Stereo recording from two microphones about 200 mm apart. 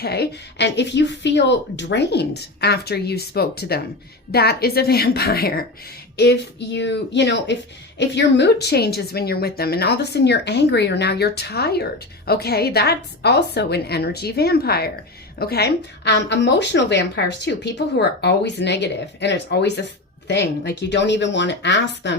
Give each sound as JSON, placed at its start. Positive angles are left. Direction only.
{"t": 0.0, "sound": "a woman's voice", "side_deg": 55}